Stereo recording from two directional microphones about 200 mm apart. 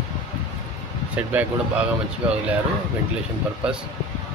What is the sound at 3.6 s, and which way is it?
Speech, 5° right (ahead or behind).